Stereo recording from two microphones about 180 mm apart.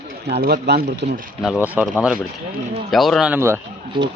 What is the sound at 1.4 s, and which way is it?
Speech, 5° right (ahead or behind).